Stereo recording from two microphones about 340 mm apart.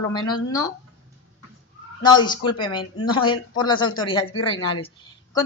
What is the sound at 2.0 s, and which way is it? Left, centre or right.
Speech, centre.